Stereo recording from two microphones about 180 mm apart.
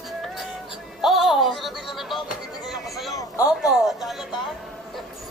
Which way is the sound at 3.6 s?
Centre (ahead or behind).